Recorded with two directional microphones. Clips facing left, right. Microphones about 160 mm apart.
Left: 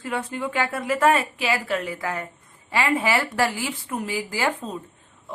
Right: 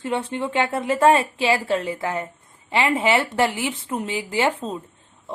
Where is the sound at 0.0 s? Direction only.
25° right (ahead or behind).